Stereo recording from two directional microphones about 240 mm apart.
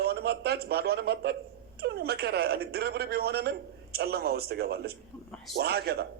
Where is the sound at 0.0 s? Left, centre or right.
Right.